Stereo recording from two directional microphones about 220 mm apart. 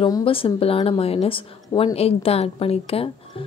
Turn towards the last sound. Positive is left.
turn(degrees=25)  # may be behind; listen again after turning